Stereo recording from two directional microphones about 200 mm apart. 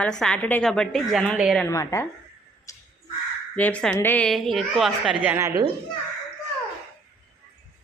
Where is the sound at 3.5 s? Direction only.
5° left (ahead or behind); by 5.7 s 15° right (ahead or behind).